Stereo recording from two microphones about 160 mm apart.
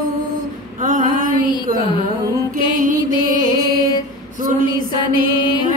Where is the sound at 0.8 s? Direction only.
55° right (ahead or behind).